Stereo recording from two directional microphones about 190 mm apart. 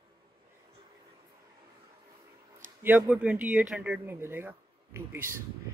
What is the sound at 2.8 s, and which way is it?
Speech, 10° right (ahead or behind).